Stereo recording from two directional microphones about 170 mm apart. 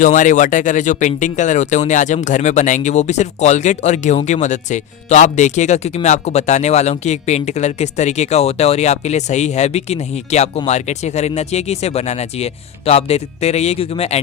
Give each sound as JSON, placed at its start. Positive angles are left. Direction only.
{"t": 0.0, "sound": "speech", "side_deg": 50}